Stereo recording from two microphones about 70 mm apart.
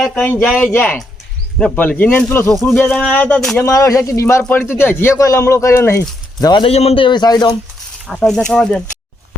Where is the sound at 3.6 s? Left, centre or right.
Left.